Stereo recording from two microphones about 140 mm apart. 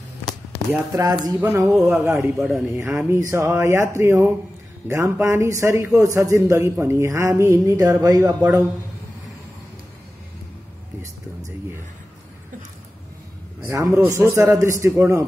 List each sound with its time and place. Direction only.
0.7 s a man's voice: 25° right (ahead or behind); by 2.6 s 5° right (ahead or behind)
2.7 s a man's voice: 20° right (ahead or behind)
13.7 s a man's voice: 20° right (ahead or behind)